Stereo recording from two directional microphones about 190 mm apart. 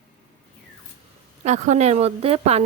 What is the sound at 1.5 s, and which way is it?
A woman's voice, 40° right (ahead or behind).